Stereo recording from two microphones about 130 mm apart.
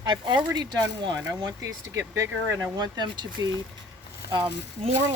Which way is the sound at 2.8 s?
35° right (ahead or behind).